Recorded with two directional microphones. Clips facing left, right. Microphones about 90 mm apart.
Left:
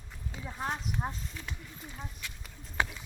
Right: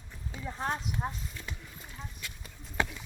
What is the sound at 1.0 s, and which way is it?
Speech, 5° left (ahead or behind).